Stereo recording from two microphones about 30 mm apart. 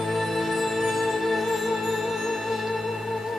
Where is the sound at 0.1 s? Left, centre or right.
Centre.